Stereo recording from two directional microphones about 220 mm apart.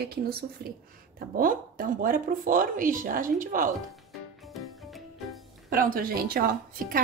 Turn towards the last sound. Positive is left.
turn(degrees=-40)  # may be behind; listen again after turning